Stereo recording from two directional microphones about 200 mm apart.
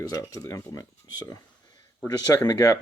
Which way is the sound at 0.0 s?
20° left (ahead or behind).